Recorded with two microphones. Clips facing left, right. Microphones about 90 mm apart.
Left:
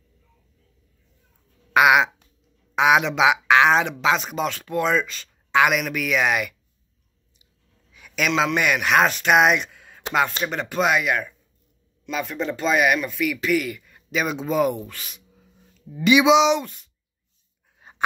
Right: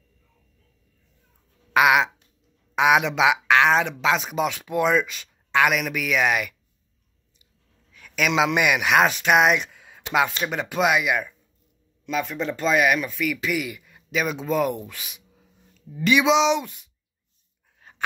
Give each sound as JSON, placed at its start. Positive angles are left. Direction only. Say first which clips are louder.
{"t": 1.7, "sound": "speech", "louder": "left 2 dB", "side_deg": 0}
{"t": 5.5, "sound": "speech", "louder": "left 2 dB", "side_deg": 0}
{"t": 8.0, "sound": "a sound", "louder": "even", "side_deg": 10}
{"t": 8.3, "sound": "speech", "louder": "even", "side_deg": -10}
{"t": 15.9, "sound": "speech", "louder": "left 3 dB", "side_deg": 5}
{"t": 17.7, "sound": "dog", "louder": "left 3 dB", "side_deg": 20}